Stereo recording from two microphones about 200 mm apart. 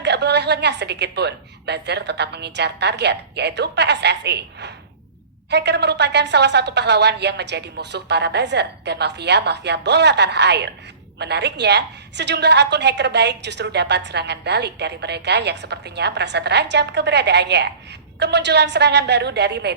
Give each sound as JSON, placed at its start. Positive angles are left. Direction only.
{"t": 0.0, "sound": "a woman's voice", "side_deg": -60}